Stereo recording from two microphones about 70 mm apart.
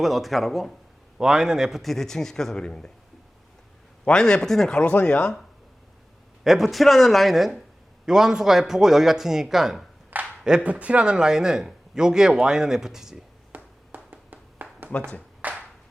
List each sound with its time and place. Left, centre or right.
0.0 s a man's voice: centre
4.0 s speech: centre
6.4 s a man's voice: centre
10.4 s a man's voice: centre
13.5 s a sound: right